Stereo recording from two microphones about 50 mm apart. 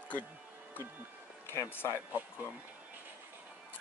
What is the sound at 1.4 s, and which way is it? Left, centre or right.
Speech, left.